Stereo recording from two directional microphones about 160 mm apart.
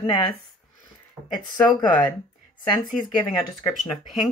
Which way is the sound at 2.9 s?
Centre (ahead or behind).